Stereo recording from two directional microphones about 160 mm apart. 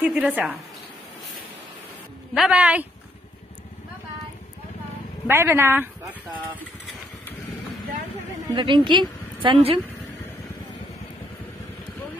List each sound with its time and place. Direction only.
0.0 s speech: 10° right (ahead or behind)
2.3 s speech: 5° right (ahead or behind)
5.3 s speech: 15° right (ahead or behind)
8.5 s a woman's voice: 30° right (ahead or behind)